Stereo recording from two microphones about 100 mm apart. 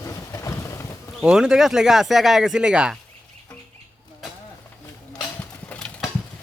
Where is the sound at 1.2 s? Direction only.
5° right (ahead or behind).